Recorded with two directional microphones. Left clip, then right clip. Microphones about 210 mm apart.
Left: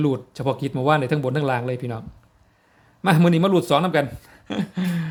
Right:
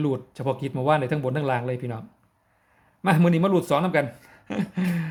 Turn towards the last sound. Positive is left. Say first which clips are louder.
# left 1 dB
turn(degrees=5)  # may be behind; listen again after turning